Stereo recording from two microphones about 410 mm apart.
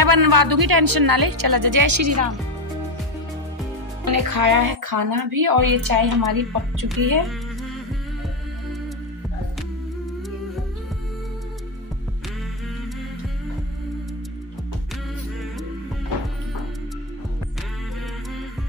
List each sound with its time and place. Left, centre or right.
0.0 s speech: right
4.0 s speech: right